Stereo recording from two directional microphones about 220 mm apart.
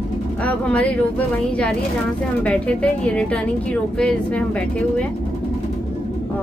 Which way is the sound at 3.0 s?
5° left (ahead or behind).